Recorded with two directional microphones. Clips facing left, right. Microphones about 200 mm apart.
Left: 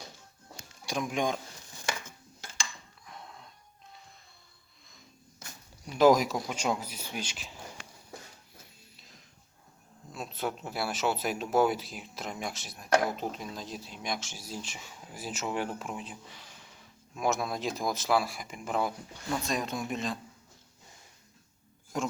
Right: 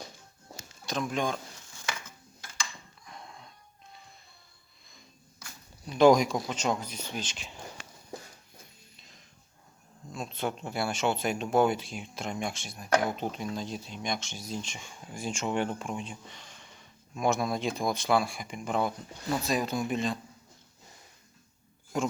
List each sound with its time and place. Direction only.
0.8 s speech: 15° left (ahead or behind)
3.1 s wheeze: centre (ahead or behind)
5.8 s speech: 5° left (ahead or behind)
10.1 s speech: 5° left (ahead or behind)
21.9 s speech: centre (ahead or behind)